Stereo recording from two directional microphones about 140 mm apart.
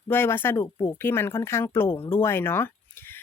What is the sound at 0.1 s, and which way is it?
Speech, 15° left (ahead or behind).